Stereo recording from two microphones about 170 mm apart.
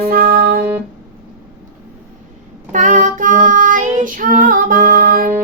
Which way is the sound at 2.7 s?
45° right (ahead or behind).